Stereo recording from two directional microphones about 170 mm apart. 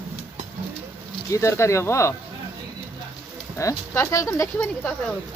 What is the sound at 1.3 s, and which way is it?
Speech, 15° left (ahead or behind).